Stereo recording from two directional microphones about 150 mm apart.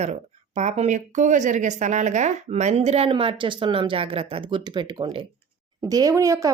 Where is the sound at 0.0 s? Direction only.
50° right (ahead or behind).